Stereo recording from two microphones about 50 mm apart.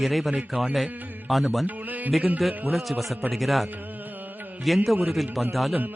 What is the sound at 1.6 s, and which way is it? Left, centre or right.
Music, right.